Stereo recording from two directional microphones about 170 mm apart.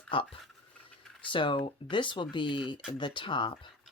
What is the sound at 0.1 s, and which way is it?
Speech, 30° left (ahead or behind).